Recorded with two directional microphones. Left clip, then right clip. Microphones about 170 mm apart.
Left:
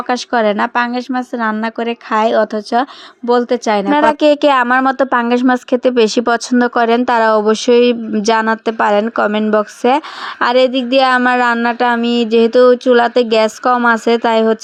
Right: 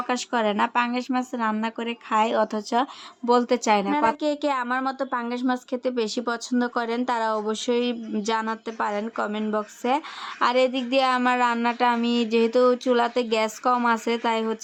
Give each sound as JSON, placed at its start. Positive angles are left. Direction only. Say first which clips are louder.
{"t": 0.1, "sound": "speech", "louder": "left 12 dB", "side_deg": 35}
{"t": 3.9, "sound": "a woman's voice", "louder": "left 12 dB", "side_deg": 45}